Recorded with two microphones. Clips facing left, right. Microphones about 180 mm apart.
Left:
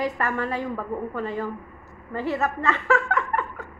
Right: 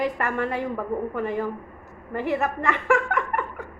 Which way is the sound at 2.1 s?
15° right (ahead or behind).